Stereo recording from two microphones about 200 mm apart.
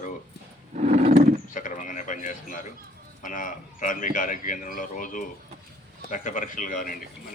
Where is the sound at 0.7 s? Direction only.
35° right (ahead or behind).